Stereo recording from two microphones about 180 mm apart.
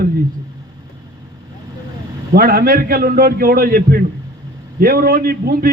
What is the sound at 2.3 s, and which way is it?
A man's voice, 55° right (ahead or behind).